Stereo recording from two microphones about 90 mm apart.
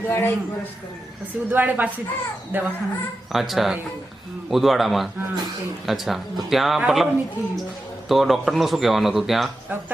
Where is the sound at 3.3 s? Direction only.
Centre (ahead or behind).